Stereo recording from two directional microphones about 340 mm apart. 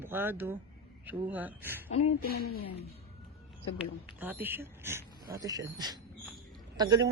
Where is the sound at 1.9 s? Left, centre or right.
Left.